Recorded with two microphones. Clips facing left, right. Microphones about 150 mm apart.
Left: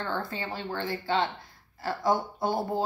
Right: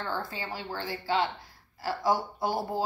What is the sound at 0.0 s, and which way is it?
A woman's voice, 5° right (ahead or behind).